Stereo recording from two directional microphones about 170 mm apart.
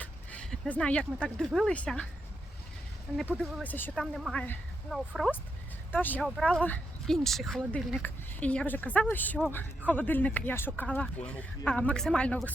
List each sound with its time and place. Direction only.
0.0 s a sound: 10° left (ahead or behind)
1.5 s speech: 5° left (ahead or behind)
3.4 s speech: 10° left (ahead or behind)
4.0 s speech: centre (ahead or behind)
5.9 s speech: 10° left (ahead or behind)